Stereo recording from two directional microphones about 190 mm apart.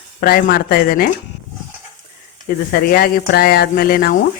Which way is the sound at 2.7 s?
50° left (ahead or behind).